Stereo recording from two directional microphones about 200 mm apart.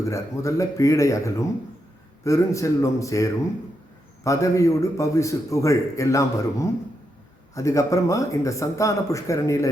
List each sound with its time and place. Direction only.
0.0 s a man's voice: 15° left (ahead or behind)